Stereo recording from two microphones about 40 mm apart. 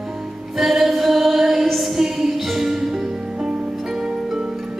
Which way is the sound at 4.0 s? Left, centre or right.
Centre.